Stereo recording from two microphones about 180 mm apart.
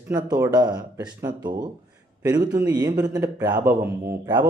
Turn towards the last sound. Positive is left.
turn(degrees=-20)  # may be behind; listen again after turning